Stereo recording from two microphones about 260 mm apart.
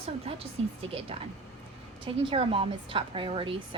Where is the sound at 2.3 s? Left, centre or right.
Right.